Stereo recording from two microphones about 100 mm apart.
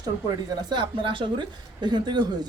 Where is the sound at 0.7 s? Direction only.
50° right (ahead or behind).